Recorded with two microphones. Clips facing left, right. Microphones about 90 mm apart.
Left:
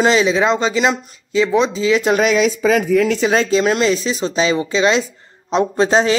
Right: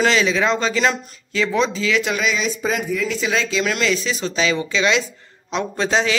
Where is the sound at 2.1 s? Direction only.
60° left (ahead or behind).